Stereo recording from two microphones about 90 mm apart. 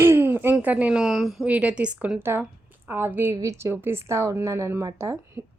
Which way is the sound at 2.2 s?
25° right (ahead or behind).